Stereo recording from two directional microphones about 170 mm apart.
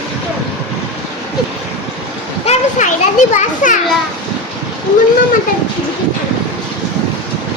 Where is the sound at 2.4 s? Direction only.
40° left (ahead or behind).